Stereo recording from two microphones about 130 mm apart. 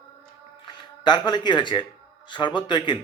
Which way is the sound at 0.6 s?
35° left (ahead or behind).